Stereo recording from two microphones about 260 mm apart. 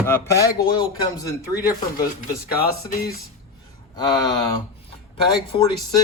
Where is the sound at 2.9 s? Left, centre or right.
Left.